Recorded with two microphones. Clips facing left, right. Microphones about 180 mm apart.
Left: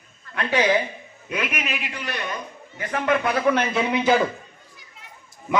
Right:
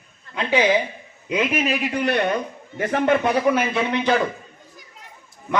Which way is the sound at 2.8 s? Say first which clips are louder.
Right 6 dB; 45° right (ahead or behind).